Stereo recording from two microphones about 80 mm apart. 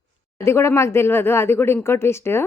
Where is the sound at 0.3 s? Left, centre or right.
Left.